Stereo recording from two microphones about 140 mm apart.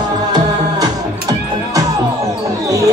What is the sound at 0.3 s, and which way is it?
Music, 30° right (ahead or behind).